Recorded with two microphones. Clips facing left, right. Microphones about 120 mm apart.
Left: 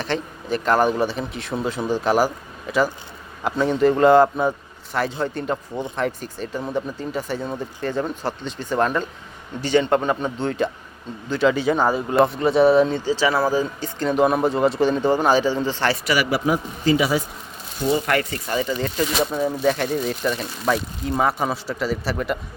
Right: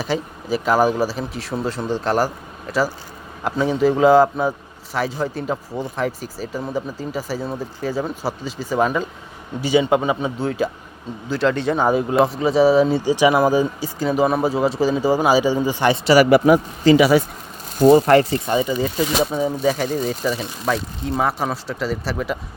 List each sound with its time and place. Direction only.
0.0 s speech: 5° right (ahead or behind)
13.1 s speech: 15° right (ahead or behind)
16.0 s speech: 40° right (ahead or behind)
16.3 s speech: 75° right (ahead or behind)
17.7 s speech: 45° right (ahead or behind); by 18.7 s 25° right (ahead or behind)
18.7 s speech: 5° right (ahead or behind)